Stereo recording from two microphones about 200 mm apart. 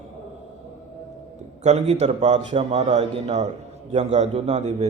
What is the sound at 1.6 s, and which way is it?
A man's voice, 35° right (ahead or behind).